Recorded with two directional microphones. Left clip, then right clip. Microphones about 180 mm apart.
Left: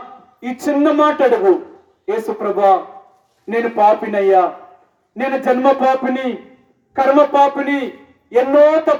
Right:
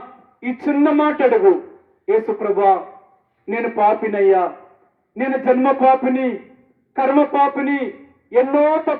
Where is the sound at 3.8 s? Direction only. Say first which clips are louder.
Left 2 dB; 50° left (ahead or behind).